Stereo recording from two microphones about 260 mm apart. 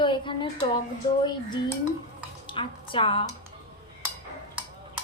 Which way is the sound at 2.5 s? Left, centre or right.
Centre.